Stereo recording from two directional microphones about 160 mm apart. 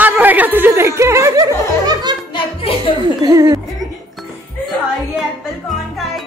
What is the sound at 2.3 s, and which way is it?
Music, 30° left (ahead or behind).